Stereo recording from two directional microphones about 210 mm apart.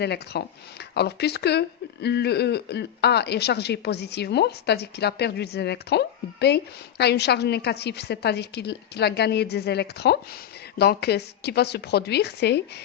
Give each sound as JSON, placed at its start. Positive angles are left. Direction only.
{"t": 0.0, "sound": "speech", "side_deg": 50}